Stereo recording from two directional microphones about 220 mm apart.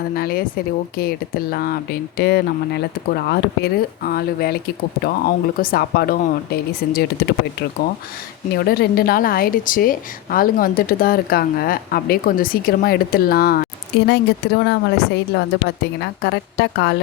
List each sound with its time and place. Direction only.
0.2 s speech: 45° left (ahead or behind)
8.5 s speech: 45° left (ahead or behind)